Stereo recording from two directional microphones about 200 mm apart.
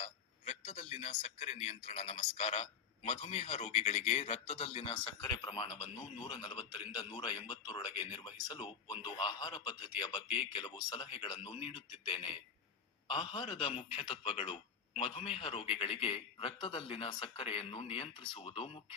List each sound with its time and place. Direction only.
0.0 s a man's voice: 30° left (ahead or behind)